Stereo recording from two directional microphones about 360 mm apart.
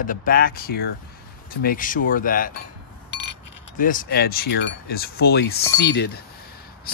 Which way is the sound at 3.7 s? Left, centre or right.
Left.